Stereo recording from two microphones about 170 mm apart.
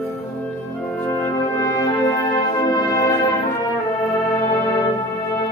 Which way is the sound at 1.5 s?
20° left (ahead or behind).